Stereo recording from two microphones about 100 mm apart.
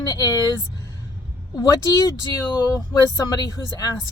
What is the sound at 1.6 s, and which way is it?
Speech, 35° left (ahead or behind).